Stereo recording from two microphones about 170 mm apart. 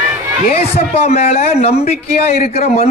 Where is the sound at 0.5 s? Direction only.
35° left (ahead or behind).